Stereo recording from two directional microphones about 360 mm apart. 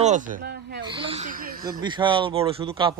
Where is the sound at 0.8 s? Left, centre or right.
Centre.